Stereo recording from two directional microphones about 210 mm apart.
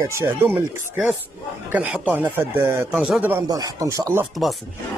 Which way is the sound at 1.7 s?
5° right (ahead or behind).